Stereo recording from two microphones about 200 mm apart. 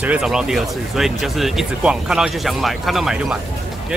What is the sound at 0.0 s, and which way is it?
Speech, 5° right (ahead or behind).